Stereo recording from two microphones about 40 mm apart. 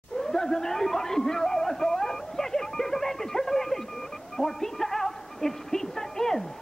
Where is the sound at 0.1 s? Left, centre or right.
Centre.